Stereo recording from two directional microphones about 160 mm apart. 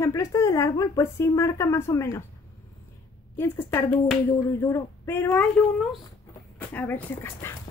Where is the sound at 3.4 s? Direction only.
15° left (ahead or behind).